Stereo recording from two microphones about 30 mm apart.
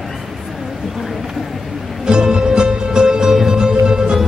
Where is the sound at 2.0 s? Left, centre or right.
Right.